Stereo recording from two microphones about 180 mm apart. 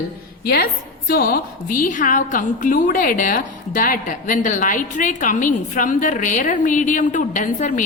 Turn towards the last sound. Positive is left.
turn(degrees=45)  # may be behind; listen again after turning